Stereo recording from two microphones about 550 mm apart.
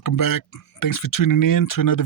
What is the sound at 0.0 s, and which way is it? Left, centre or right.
Speech, left.